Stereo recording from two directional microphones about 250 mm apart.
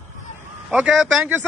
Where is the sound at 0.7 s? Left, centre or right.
Centre.